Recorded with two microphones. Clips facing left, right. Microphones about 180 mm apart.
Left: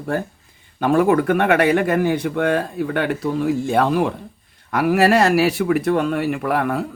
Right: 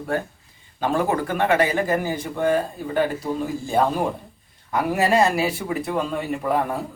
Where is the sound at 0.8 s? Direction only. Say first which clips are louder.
Left 6 dB; 60° left (ahead or behind).